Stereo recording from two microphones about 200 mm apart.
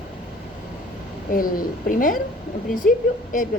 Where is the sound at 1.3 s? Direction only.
45° left (ahead or behind).